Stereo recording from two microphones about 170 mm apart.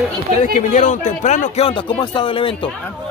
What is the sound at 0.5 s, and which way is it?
Speech, 45° left (ahead or behind).